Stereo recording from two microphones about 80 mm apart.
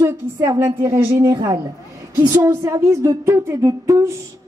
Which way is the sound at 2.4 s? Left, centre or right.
Right.